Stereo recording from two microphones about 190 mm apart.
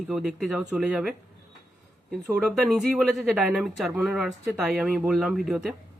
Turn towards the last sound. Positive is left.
turn(degrees=0)  # may be behind; listen again after turning